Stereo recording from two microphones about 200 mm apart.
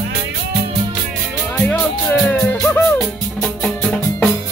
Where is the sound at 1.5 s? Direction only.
10° left (ahead or behind).